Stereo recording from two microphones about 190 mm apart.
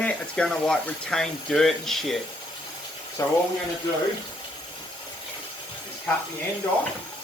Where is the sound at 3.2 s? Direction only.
15° left (ahead or behind).